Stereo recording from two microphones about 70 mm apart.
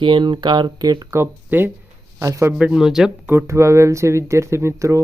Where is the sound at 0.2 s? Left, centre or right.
Right.